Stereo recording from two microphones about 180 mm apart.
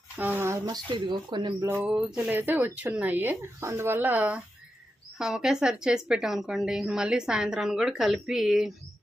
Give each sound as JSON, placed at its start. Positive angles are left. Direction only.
{"t": 0.2, "sound": "speech", "side_deg": -10}
{"t": 1.7, "sound": "a woman's voice", "side_deg": -10}